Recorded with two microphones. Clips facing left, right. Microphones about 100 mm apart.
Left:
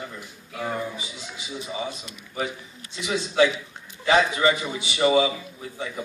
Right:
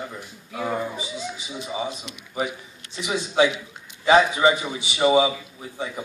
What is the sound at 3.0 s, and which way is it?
A man's voice, 15° right (ahead or behind).